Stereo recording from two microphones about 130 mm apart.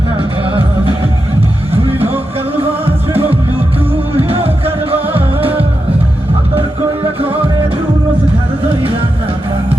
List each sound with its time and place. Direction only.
1.7 s music: 50° right (ahead or behind)